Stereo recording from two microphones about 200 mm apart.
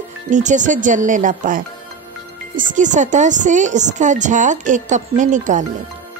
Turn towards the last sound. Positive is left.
turn(degrees=-40)  # may be behind; listen again after turning